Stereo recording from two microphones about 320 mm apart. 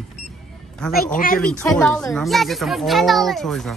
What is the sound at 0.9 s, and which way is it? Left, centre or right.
Speech, left.